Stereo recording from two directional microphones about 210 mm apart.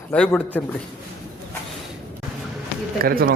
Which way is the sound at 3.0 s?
45° right (ahead or behind).